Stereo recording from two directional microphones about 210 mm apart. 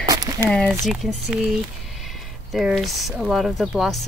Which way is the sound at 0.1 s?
15° right (ahead or behind).